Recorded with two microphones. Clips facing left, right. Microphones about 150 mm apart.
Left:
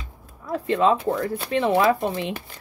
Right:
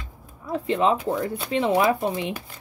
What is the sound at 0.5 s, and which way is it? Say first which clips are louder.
Speech: left 2 dB; 20° right (ahead or behind).